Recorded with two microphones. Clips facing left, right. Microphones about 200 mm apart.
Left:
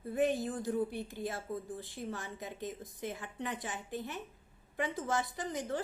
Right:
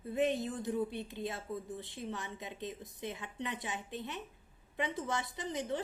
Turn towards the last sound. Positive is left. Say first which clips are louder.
# even
turn(degrees=-20)  # may be behind; listen again after turning